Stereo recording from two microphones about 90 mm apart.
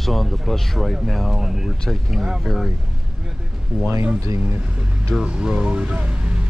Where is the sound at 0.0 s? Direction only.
Centre (ahead or behind).